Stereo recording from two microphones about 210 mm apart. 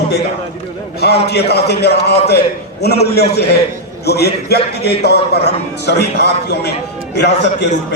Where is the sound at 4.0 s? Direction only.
50° left (ahead or behind).